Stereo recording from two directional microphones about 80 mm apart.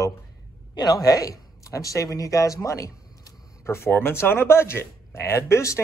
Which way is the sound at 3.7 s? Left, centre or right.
Left.